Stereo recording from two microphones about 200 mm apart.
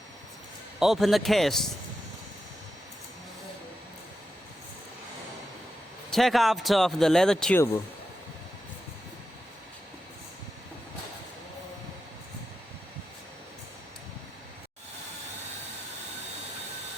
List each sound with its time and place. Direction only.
0.8 s speech: centre (ahead or behind)
6.1 s speech: centre (ahead or behind)